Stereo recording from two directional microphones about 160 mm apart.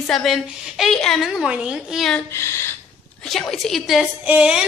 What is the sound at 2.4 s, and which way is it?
Speech, 15° left (ahead or behind).